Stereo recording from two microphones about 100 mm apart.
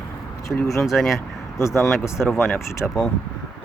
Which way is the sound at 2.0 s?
25° left (ahead or behind).